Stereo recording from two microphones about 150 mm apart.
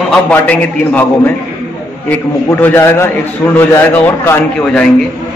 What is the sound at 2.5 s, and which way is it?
A man's voice, 15° left (ahead or behind).